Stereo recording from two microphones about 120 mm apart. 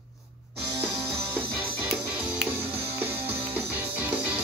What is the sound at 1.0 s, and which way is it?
Music, 15° right (ahead or behind).